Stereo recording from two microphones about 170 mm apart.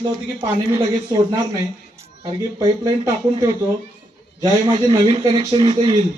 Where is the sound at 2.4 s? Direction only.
20° right (ahead or behind).